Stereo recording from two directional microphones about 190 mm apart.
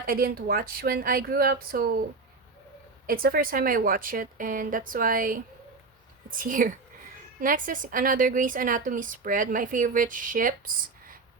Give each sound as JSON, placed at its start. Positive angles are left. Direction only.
{"t": 0.0, "sound": "a woman's voice", "side_deg": -50}
{"t": 3.1, "sound": "a woman's voice", "side_deg": -50}